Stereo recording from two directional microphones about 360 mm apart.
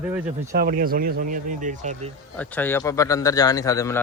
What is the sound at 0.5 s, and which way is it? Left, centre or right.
Speech, right.